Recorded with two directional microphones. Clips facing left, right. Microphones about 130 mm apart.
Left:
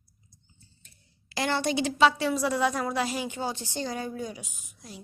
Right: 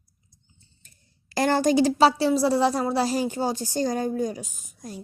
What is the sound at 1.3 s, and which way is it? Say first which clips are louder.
A child's voice: right 7 dB; 45° right (ahead or behind).